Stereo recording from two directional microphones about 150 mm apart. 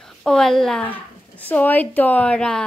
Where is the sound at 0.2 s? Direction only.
5° left (ahead or behind).